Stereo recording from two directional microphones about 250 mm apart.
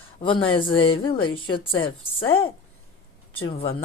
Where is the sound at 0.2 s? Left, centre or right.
Centre.